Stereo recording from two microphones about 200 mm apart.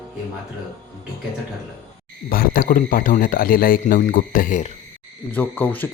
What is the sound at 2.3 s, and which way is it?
Speech, 45° left (ahead or behind).